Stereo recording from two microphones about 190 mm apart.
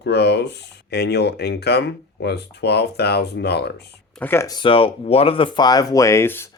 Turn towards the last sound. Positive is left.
turn(degrees=10)  # may be behind; listen again after turning